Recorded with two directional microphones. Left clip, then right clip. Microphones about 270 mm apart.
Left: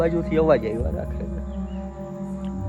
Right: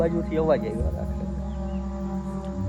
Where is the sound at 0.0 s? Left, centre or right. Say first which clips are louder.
Left 3 dB; left.